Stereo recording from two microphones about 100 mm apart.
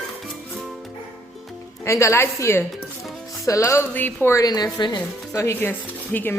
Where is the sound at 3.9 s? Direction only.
20° left (ahead or behind).